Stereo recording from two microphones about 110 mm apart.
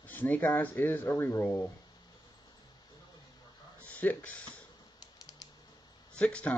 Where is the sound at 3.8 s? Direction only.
15° left (ahead or behind).